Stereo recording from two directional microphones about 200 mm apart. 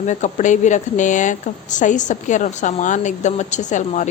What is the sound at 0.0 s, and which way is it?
Speech, 35° left (ahead or behind).